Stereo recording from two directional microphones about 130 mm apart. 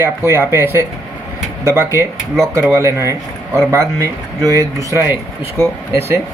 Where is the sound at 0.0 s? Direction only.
15° right (ahead or behind).